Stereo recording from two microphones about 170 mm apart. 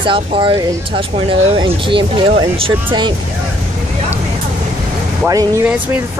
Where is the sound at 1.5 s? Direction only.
30° right (ahead or behind).